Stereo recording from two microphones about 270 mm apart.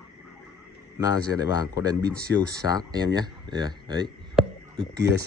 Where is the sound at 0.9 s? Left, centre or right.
Centre.